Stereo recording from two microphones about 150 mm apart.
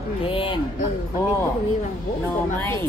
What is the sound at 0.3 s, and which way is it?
Speech, 35° left (ahead or behind).